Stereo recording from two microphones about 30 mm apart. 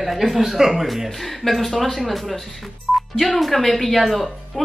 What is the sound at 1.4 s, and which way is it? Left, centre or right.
Speech, left.